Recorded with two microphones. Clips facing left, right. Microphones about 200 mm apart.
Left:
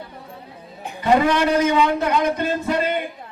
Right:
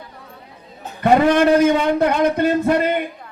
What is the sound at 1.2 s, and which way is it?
A man's voice, 55° right (ahead or behind).